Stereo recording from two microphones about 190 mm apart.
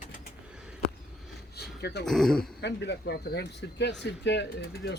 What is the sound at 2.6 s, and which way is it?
Speech, 65° left (ahead or behind).